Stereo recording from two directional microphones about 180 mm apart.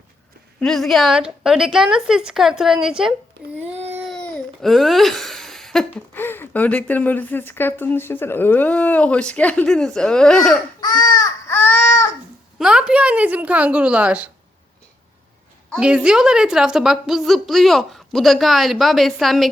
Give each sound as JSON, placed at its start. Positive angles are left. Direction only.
{"t": 0.6, "sound": "a woman's voice", "side_deg": 0}
{"t": 10.8, "sound": "baby cry", "side_deg": 20}
{"t": 12.5, "sound": "a woman's voice", "side_deg": -5}
{"t": 15.7, "sound": "a woman's voice", "side_deg": -5}